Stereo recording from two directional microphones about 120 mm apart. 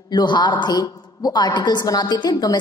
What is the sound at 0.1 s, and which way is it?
A woman's voice, 40° left (ahead or behind).